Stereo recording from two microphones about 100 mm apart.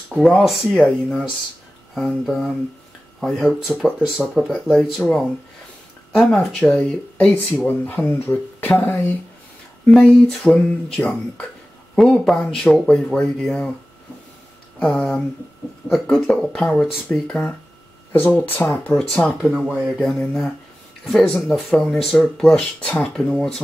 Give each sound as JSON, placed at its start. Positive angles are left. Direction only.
{"t": 0.1, "sound": "speech", "side_deg": 0}
{"t": 2.0, "sound": "speech", "side_deg": 5}
{"t": 7.5, "sound": "speech", "side_deg": 20}
{"t": 10.4, "sound": "speech", "side_deg": 15}
{"t": 15.0, "sound": "speech", "side_deg": 10}
{"t": 18.1, "sound": "speech", "side_deg": 20}
{"t": 18.9, "sound": "speech", "side_deg": 10}
{"t": 19.4, "sound": "speech", "side_deg": -5}
{"t": 20.1, "sound": "speech", "side_deg": 5}